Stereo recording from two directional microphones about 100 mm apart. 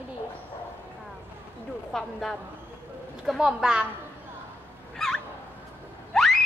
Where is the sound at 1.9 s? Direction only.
5° left (ahead or behind).